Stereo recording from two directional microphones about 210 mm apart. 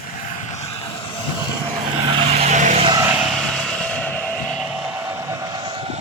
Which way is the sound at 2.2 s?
30° right (ahead or behind).